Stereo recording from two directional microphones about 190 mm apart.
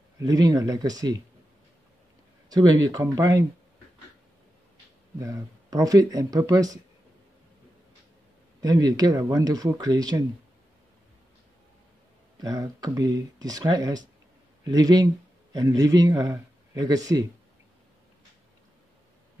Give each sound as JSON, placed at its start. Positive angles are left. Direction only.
{"t": 0.2, "sound": "speech", "side_deg": -20}
{"t": 2.5, "sound": "speech", "side_deg": -20}
{"t": 5.2, "sound": "speech", "side_deg": -15}
{"t": 8.5, "sound": "speech", "side_deg": -20}
{"t": 12.4, "sound": "speech", "side_deg": -20}